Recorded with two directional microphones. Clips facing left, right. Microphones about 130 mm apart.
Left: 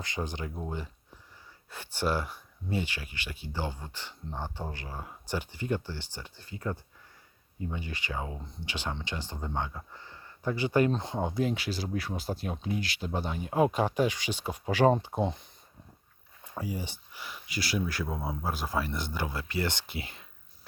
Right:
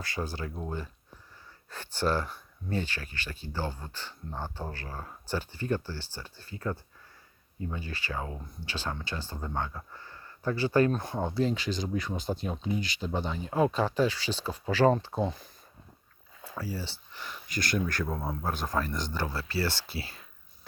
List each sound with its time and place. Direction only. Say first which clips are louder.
0.0 s speech: even; 20° left (ahead or behind)
1.7 s speech: right 1 dB; 15° left (ahead or behind)
16.6 s speech: left 1 dB; 15° left (ahead or behind)